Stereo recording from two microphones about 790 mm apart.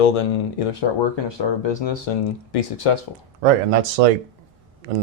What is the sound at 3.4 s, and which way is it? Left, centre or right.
Speech, right.